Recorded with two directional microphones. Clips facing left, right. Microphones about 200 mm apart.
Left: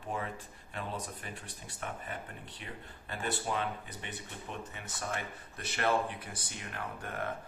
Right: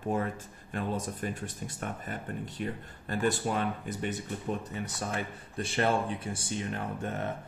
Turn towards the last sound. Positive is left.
turn(degrees=-25)  # may be behind; listen again after turning